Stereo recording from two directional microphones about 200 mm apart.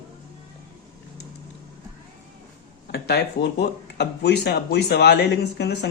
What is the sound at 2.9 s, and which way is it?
Speech, 55° left (ahead or behind).